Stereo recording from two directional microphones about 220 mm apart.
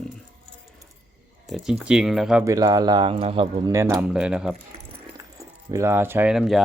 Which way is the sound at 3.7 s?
15° right (ahead or behind).